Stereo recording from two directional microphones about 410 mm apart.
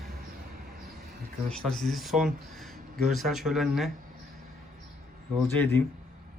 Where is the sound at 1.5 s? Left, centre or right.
Centre.